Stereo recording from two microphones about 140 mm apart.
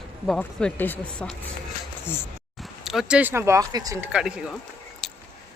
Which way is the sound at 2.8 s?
Centre (ahead or behind).